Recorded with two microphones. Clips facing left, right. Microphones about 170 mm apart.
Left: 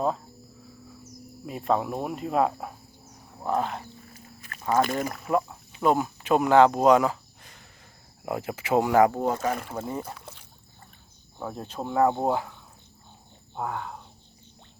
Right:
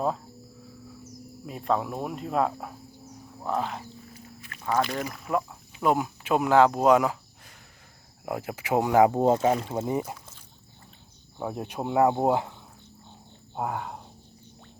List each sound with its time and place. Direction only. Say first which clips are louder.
1.5 s speech: left 1 dB; centre (ahead or behind)
3.8 s a sound: right 2 dB; 45° left (ahead or behind)
4.7 s speech: left 3 dB; 50° left (ahead or behind)
5.2 s speech: left 2 dB; 5° right (ahead or behind); by 10.0 s 20° right (ahead or behind)
10.2 s a sound: left 6 dB; 65° left (ahead or behind)
11.3 s speech: right 2 dB; 15° right (ahead or behind)
13.6 s speech: right 1 dB; 15° right (ahead or behind)